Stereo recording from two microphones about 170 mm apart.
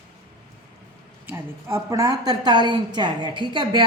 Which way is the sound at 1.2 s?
15° right (ahead or behind).